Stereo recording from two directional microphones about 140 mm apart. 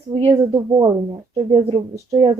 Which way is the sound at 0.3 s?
25° right (ahead or behind).